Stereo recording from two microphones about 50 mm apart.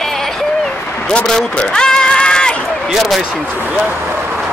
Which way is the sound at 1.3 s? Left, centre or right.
Centre.